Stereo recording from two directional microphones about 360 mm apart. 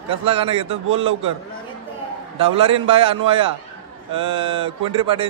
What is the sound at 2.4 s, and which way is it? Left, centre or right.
A man's voice, centre.